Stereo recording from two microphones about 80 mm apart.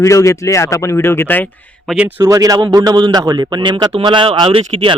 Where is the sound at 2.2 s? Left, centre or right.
Right.